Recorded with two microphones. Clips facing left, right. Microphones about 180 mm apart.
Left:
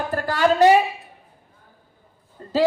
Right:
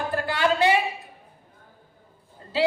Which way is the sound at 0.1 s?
45° left (ahead or behind).